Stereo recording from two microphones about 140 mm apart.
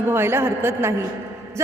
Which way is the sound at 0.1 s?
15° right (ahead or behind).